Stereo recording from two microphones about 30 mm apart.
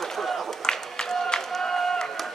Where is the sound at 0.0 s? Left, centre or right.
Centre.